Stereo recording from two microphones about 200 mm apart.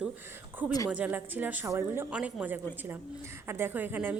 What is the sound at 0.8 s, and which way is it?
A woman's voice, 5° right (ahead or behind).